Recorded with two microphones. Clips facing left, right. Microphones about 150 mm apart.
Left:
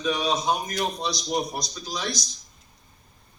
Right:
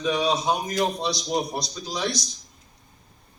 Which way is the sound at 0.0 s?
25° right (ahead or behind).